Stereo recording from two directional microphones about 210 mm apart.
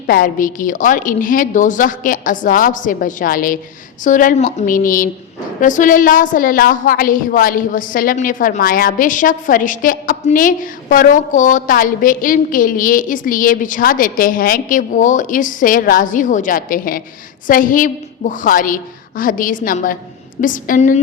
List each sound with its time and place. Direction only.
0.1 s a woman's voice: 40° left (ahead or behind)